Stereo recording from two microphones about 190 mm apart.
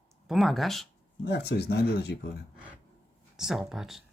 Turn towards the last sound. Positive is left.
turn(degrees=0)  # may be behind; listen again after turning